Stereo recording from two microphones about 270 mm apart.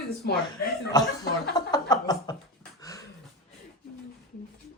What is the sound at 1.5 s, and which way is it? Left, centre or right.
Chuckle, centre.